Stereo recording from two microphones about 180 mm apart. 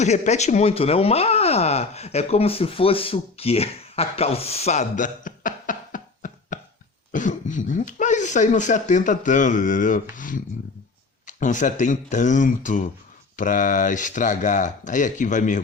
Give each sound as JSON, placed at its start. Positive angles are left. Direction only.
{"t": 0.0, "sound": "speech", "side_deg": 40}